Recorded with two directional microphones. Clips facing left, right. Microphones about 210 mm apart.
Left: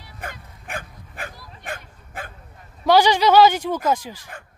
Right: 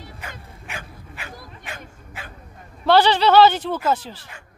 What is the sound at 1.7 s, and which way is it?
Bow-wow, 50° left (ahead or behind).